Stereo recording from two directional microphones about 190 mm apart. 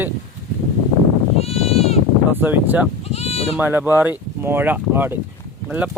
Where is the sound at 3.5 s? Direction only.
10° right (ahead or behind).